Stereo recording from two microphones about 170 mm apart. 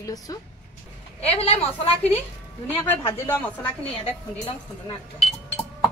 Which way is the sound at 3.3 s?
10° left (ahead or behind).